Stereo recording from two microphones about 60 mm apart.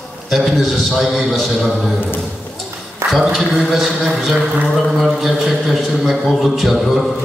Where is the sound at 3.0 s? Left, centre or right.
Right.